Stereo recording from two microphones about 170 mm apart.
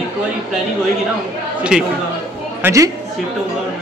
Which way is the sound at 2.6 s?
20° right (ahead or behind).